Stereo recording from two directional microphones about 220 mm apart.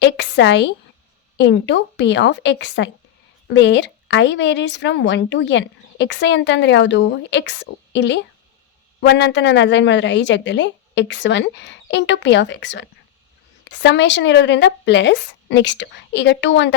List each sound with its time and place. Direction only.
0.0 s a woman's voice: 50° left (ahead or behind)